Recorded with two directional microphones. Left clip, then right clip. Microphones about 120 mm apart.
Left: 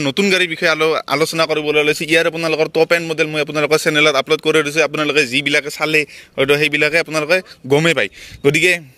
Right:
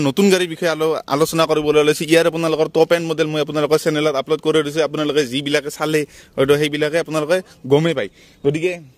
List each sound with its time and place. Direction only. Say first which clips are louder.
0.0 s speech: even; 55° right (ahead or behind)
0.3 s a man's voice: left 2 dB; 40° right (ahead or behind)
0.7 s a man's voice: left 2 dB; 25° right (ahead or behind)
1.2 s a man's voice: right 4 dB; 60° right (ahead or behind); by 4.0 s 25° right (ahead or behind)
4.0 s speech: left 5 dB; 10° right (ahead or behind)
4.5 s a man's voice: left 2 dB; 25° right (ahead or behind)
5.8 s a man's voice: left 3 dB; 50° right (ahead or behind)
6.6 s a man's voice: left 4 dB; 25° right (ahead or behind)
7.7 s speech: left 2 dB; 15° right (ahead or behind)
8.5 s a man's voice: left 6 dB; 15° left (ahead or behind)